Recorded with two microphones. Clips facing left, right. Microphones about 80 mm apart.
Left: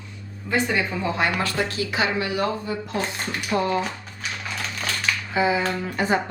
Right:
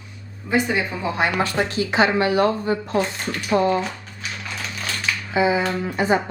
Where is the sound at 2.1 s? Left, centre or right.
Right.